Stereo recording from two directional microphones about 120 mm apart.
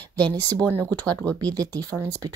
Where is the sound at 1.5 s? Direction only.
30° right (ahead or behind).